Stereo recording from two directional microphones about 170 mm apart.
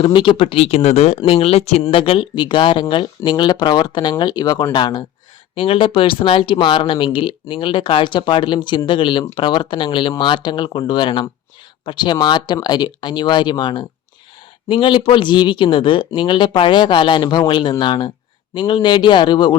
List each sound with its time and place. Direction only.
0.0 s speech: 30° left (ahead or behind)